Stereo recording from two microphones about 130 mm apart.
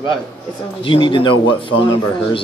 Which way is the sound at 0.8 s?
40° left (ahead or behind).